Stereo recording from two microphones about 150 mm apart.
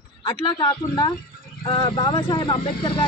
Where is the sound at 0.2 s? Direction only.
30° left (ahead or behind).